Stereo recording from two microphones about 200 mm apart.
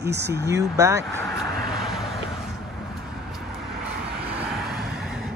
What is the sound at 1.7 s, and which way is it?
Vehicle, centre (ahead or behind).